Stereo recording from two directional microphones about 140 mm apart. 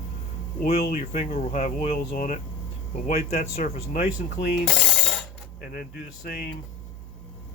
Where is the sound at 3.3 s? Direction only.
50° left (ahead or behind).